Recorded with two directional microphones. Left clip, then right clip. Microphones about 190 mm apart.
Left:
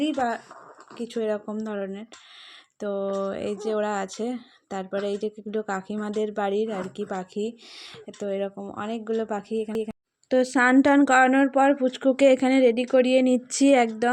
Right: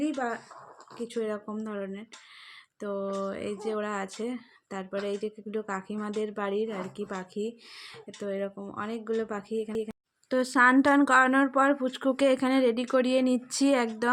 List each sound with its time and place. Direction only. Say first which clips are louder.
0.0 s speech: left 5 dB; 35° left (ahead or behind)
0.9 s speech: left 5 dB; 25° left (ahead or behind)
10.2 s speech: left 2 dB; 10° left (ahead or behind)